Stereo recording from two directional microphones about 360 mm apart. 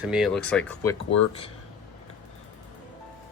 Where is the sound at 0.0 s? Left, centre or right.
Centre.